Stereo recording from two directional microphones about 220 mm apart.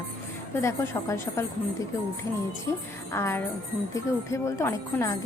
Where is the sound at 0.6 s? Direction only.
10° left (ahead or behind).